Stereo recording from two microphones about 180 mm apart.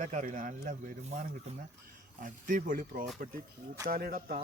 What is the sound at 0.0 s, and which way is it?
Speech, 45° right (ahead or behind).